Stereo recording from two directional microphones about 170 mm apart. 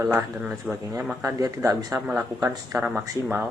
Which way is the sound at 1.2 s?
20° right (ahead or behind).